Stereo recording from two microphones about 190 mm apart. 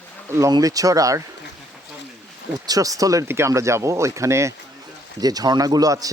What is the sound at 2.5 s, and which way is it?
A man's voice, 20° right (ahead or behind).